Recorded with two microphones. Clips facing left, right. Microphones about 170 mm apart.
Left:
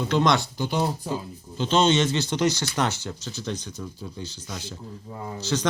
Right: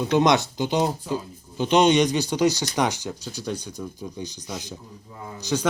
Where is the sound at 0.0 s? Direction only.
15° right (ahead or behind).